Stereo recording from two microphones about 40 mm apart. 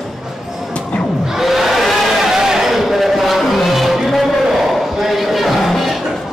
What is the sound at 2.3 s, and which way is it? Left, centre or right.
Music, centre.